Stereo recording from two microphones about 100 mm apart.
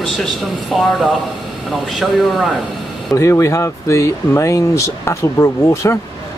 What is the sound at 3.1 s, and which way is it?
Speech, 30° left (ahead or behind).